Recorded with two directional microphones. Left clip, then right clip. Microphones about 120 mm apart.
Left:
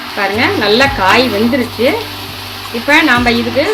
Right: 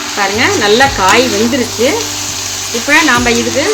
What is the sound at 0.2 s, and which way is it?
Speech, 15° right (ahead or behind).